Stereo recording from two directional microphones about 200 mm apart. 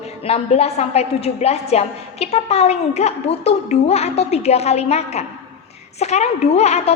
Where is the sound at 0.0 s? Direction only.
30° left (ahead or behind).